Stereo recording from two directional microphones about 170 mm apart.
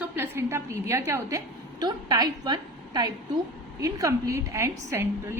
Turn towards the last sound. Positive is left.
turn(degrees=-15)  # may be behind; listen again after turning